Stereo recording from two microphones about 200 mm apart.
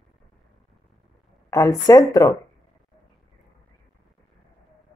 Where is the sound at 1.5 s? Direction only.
15° left (ahead or behind).